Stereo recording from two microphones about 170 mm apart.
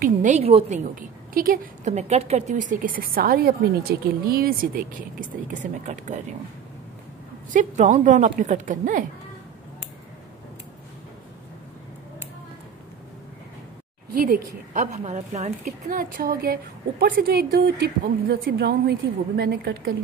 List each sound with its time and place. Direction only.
0.0 s a woman's voice: 45° right (ahead or behind)
1.9 s a woman's voice: 40° right (ahead or behind)
7.5 s a woman's voice: 45° right (ahead or behind)
14.1 s a woman's voice: 55° right (ahead or behind)